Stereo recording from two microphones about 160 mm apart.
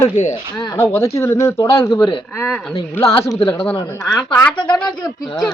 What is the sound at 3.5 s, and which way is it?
Speech, 10° left (ahead or behind).